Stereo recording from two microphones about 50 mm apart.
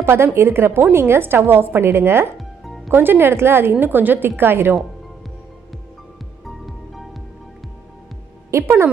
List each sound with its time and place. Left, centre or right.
0.0 s a woman's voice: right
2.3 s music: centre
2.9 s a woman's voice: right
3.8 s a woman's voice: right
6.4 s music: centre
8.5 s speech: right